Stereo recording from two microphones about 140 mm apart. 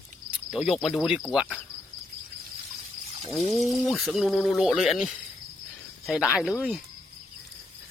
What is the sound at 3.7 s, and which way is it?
Speech, centre (ahead or behind).